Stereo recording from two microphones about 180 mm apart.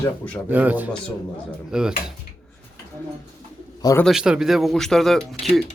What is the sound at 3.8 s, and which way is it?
Speech, 20° left (ahead or behind).